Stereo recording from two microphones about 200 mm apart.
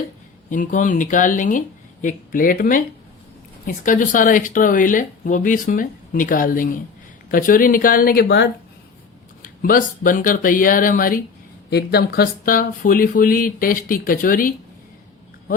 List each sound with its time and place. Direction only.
0.5 s speech: 40° left (ahead or behind)